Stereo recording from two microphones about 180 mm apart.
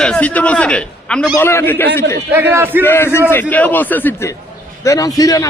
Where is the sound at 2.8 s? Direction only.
10° left (ahead or behind).